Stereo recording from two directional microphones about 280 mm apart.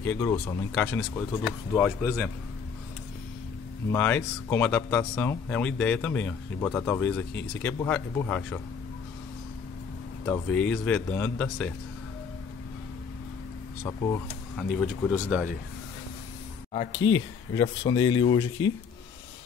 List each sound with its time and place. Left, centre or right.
0.0 s speech: centre
3.9 s speech: centre
10.2 s speech: centre
13.8 s speech: centre
16.9 s speech: left
17.6 s speech: centre